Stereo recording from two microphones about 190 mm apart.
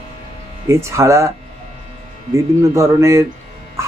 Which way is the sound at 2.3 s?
15° right (ahead or behind).